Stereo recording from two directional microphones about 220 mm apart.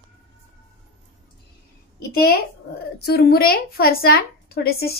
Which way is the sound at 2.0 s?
45° left (ahead or behind).